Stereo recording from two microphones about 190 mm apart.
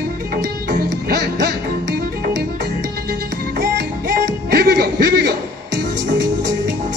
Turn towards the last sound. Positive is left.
turn(degrees=-60)  # may be behind; listen again after turning